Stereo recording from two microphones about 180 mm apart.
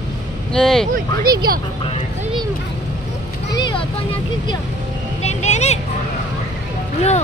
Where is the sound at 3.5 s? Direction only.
25° left (ahead or behind).